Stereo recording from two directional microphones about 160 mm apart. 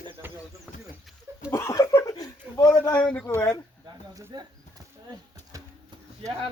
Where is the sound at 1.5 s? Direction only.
20° left (ahead or behind).